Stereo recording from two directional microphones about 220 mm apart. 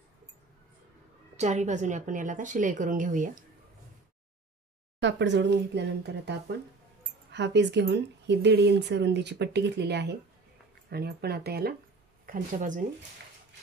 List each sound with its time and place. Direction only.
1.3 s a woman's voice: 30° right (ahead or behind)
5.0 s speech: 55° right (ahead or behind)
12.3 s a woman's voice: 35° right (ahead or behind)